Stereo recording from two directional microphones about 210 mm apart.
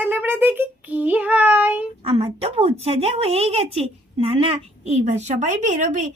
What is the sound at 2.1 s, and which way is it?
A woman's voice, 25° right (ahead or behind).